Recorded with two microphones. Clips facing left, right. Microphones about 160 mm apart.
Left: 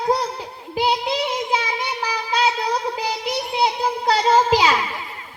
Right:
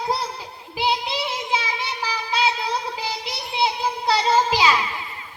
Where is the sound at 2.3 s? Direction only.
45° left (ahead or behind).